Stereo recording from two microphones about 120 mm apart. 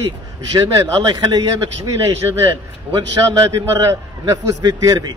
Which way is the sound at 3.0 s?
30° right (ahead or behind).